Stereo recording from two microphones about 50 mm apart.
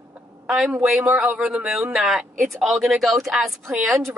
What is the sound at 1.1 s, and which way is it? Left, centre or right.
Speech, right.